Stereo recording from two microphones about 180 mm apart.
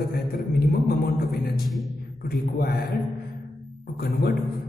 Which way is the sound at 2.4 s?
55° left (ahead or behind).